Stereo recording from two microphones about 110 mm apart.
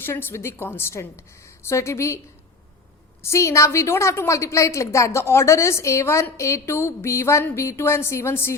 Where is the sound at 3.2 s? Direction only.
25° left (ahead or behind).